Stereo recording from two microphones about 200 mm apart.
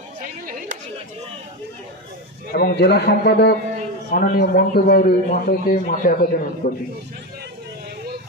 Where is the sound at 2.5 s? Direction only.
50° left (ahead or behind).